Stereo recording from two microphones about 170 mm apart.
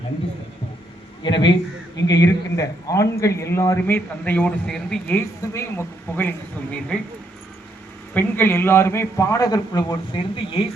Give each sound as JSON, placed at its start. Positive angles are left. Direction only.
{"t": 1.2, "sound": "a man's voice", "side_deg": 25}
{"t": 8.1, "sound": "a man's voice", "side_deg": 10}